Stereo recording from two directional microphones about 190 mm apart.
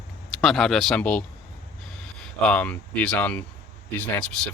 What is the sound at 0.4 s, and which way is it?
Speech, centre (ahead or behind).